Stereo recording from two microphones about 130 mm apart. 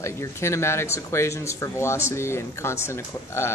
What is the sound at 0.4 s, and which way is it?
Speech, 20° left (ahead or behind).